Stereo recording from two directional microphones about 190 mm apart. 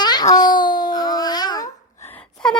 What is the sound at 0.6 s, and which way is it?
Dog, 45° left (ahead or behind).